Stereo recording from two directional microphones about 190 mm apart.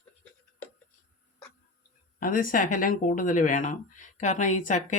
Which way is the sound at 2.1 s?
45° left (ahead or behind).